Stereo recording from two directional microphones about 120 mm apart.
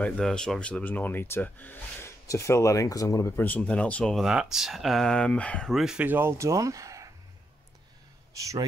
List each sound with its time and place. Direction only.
0.0 s speech: 5° left (ahead or behind)
5.9 s speech: 15° right (ahead or behind)
8.3 s speech: 25° right (ahead or behind)